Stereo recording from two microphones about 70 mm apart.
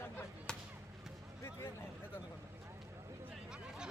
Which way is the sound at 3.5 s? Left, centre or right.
Centre.